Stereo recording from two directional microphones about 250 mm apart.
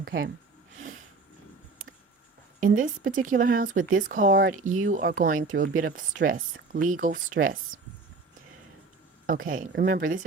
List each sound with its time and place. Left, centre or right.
2.6 s speech: right
9.2 s speech: right